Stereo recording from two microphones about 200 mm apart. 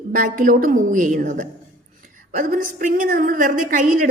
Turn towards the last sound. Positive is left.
turn(degrees=-40)  # may be behind; listen again after turning